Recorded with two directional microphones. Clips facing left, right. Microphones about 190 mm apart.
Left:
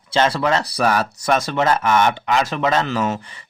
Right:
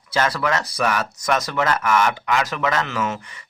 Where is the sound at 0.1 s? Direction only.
25° left (ahead or behind).